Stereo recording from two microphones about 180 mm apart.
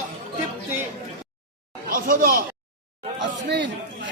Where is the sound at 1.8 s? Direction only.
50° right (ahead or behind).